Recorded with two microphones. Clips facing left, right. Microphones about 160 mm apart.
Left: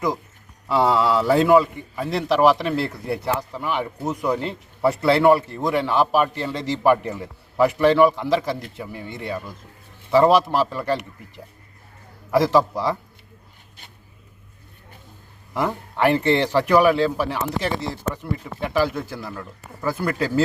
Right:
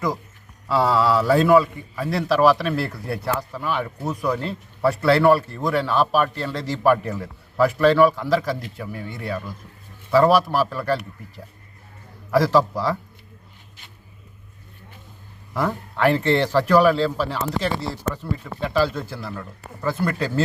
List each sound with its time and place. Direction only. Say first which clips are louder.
0.7 s a man's voice: even; 20° left (ahead or behind)
12.3 s a man's voice: even; 20° left (ahead or behind)
15.5 s a man's voice: left 1 dB; 15° left (ahead or behind)